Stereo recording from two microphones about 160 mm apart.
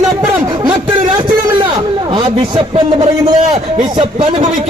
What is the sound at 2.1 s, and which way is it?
A man's voice, 30° right (ahead or behind).